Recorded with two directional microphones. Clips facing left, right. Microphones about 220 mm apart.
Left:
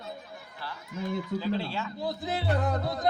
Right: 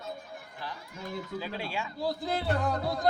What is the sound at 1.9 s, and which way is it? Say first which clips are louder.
Speech: right 2 dB; 20° left (ahead or behind).